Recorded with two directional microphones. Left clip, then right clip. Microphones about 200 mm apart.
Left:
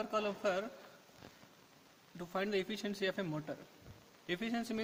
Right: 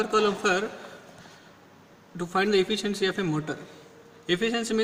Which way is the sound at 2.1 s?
55° left (ahead or behind).